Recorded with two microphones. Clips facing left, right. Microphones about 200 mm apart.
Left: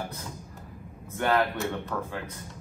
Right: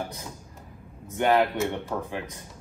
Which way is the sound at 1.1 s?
20° right (ahead or behind).